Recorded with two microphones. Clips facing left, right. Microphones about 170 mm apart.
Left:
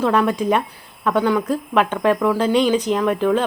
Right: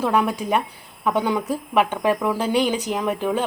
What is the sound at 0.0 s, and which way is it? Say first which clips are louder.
Speech: left 3 dB; 10° right (ahead or behind).